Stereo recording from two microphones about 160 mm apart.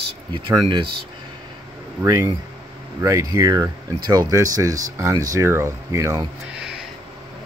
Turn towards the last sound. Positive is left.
turn(degrees=-5)  # may be behind; listen again after turning